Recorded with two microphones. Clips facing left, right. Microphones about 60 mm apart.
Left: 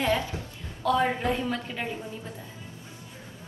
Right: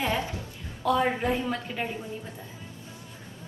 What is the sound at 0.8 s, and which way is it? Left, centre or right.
A woman's voice, centre.